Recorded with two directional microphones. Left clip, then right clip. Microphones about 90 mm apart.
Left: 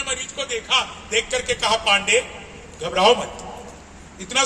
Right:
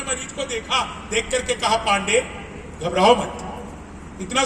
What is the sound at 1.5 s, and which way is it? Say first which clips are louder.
A man's voice: left 1 dB; 20° left (ahead or behind).